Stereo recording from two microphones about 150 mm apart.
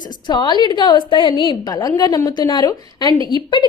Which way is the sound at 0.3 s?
30° left (ahead or behind).